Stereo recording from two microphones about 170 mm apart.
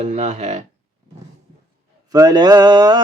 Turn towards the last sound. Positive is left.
turn(degrees=-25)  # may be behind; listen again after turning